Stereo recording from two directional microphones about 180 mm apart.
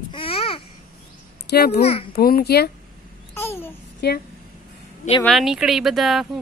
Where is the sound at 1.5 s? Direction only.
60° left (ahead or behind).